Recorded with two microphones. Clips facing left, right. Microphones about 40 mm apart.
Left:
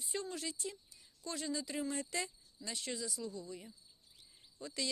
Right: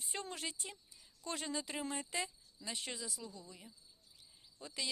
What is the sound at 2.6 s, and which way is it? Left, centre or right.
Speech, right.